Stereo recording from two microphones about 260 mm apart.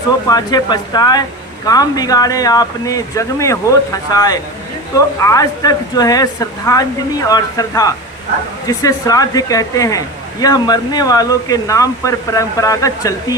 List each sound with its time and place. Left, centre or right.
0.3 s speech: centre